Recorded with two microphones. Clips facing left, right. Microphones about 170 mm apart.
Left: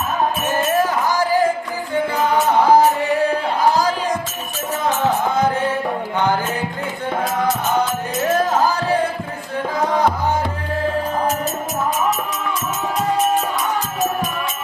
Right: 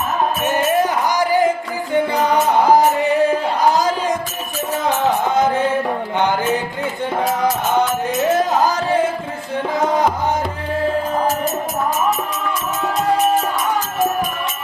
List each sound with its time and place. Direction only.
0.8 s music: 20° right (ahead or behind)
2.6 s music: 20° right (ahead or behind)
8.4 s music: 20° right (ahead or behind)